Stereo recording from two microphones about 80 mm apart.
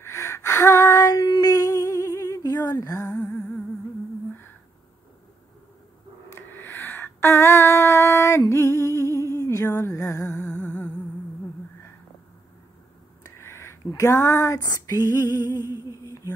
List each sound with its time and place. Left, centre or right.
0.0 s gasp: left
1.1 s a sound: left
3.2 s humming: centre
6.3 s a sound: left
9.3 s music: left
9.7 s music: left
9.9 s music: left
10.4 s music: centre
13.4 s a sound: left
14.6 s female singing: left
15.2 s music: right